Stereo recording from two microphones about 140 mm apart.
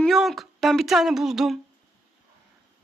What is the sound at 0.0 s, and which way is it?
Speech, centre (ahead or behind).